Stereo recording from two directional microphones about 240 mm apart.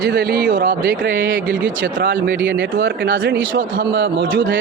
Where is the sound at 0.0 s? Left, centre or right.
Right.